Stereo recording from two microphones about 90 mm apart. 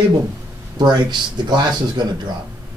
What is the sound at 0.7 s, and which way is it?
Speech, 55° right (ahead or behind).